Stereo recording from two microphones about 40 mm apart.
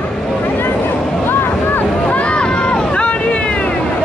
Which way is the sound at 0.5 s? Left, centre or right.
Left.